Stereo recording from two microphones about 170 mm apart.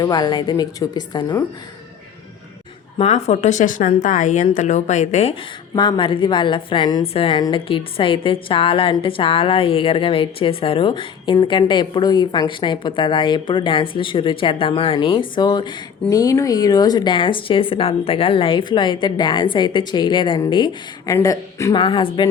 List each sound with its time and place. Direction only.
0.0 s speech: 25° left (ahead or behind)
3.0 s speech: 40° left (ahead or behind)
5.7 s a woman's voice: 25° left (ahead or behind)
21.8 s a woman's voice: 30° left (ahead or behind)